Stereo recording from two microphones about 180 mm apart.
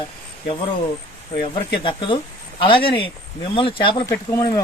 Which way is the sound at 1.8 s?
30° left (ahead or behind).